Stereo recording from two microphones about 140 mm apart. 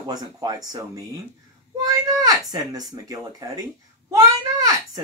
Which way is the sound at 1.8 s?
25° right (ahead or behind).